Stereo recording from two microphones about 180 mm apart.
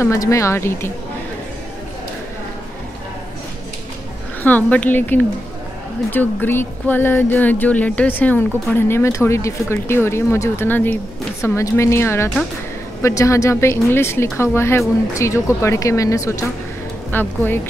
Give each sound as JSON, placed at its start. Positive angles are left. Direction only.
{"t": 0.0, "sound": "speech", "side_deg": 15}
{"t": 4.4, "sound": "speech", "side_deg": 10}